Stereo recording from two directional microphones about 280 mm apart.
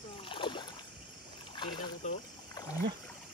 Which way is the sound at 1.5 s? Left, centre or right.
Centre.